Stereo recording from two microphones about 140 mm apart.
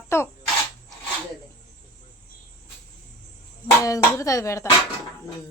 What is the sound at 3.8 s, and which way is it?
Speech, 25° left (ahead or behind).